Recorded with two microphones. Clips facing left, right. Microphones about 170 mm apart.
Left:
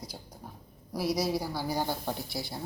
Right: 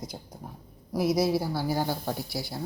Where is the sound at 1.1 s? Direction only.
10° right (ahead or behind).